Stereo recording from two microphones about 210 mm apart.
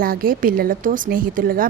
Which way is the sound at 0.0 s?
45° right (ahead or behind).